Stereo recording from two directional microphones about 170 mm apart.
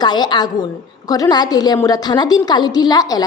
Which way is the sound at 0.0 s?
25° left (ahead or behind).